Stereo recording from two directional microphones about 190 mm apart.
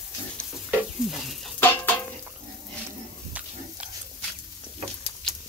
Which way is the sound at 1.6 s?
10° left (ahead or behind).